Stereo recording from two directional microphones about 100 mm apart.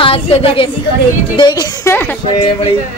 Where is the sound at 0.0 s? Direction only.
75° left (ahead or behind).